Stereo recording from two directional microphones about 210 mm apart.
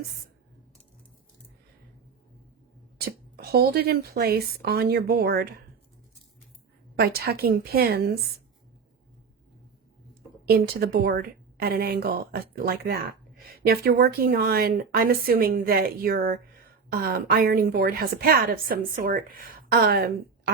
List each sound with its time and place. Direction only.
3.0 s a woman's voice: 50° right (ahead or behind)
7.0 s a woman's voice: 45° right (ahead or behind)
10.4 s a woman's voice: 45° right (ahead or behind)